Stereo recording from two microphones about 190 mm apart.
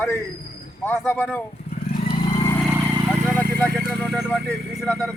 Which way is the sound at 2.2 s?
25° left (ahead or behind).